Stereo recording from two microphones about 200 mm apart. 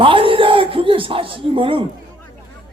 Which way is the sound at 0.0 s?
25° right (ahead or behind).